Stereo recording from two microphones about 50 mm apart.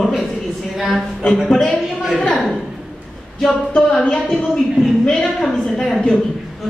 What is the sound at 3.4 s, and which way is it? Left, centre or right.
A woman's voice, centre.